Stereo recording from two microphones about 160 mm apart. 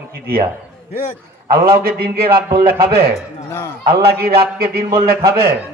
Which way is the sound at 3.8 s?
75° right (ahead or behind).